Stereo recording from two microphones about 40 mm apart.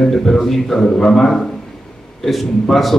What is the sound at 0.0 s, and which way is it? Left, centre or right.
A man's voice, centre.